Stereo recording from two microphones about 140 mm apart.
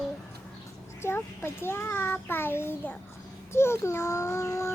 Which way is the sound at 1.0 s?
15° left (ahead or behind).